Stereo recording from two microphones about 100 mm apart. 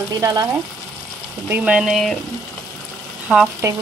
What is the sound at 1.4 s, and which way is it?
Speech, 15° right (ahead or behind).